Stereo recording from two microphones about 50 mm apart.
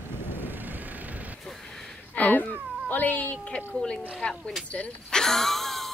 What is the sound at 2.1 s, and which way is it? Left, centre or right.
Speech, left.